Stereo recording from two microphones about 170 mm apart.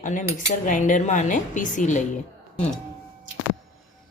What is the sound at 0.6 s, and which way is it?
Speech, 50° left (ahead or behind).